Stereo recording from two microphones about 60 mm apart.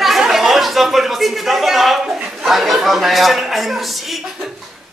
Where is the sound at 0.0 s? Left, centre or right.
Centre.